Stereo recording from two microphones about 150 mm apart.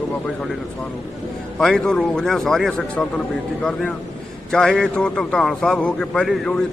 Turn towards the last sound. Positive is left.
turn(degrees=5)  # may be behind; listen again after turning